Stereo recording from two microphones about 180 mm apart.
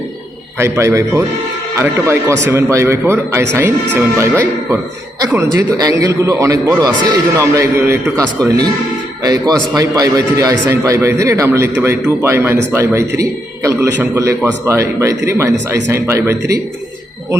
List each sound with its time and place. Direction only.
0.6 s a man's voice: 15° right (ahead or behind)